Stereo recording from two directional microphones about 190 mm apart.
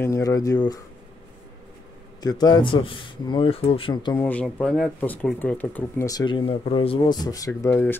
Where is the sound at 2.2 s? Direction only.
20° left (ahead or behind).